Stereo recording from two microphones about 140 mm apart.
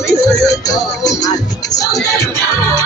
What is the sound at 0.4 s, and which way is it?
Music, 25° left (ahead or behind).